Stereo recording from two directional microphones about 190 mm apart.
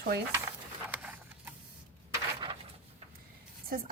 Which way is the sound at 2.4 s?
25° right (ahead or behind).